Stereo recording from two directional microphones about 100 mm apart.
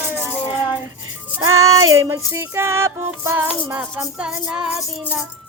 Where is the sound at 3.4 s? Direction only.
15° right (ahead or behind).